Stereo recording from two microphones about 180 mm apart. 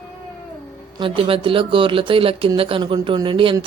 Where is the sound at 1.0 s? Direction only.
30° right (ahead or behind).